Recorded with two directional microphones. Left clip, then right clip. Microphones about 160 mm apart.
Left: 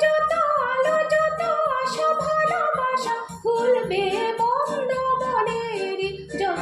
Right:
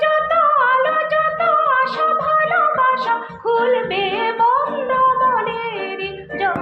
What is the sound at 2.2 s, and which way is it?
Music, 30° left (ahead or behind).